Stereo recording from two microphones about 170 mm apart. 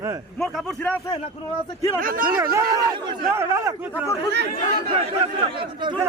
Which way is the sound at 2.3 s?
20° right (ahead or behind).